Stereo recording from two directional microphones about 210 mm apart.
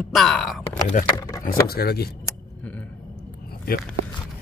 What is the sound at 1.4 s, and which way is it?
Speech, 45° left (ahead or behind).